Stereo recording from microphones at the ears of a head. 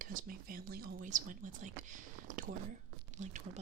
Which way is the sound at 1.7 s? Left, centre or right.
Right.